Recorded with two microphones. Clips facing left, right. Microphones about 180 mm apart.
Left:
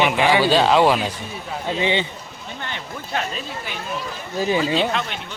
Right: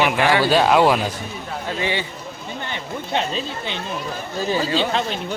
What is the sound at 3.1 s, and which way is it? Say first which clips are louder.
Speech: right 3 dB; 25° right (ahead or behind).